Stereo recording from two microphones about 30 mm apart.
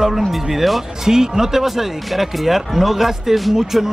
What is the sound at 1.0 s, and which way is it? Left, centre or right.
Speech, centre.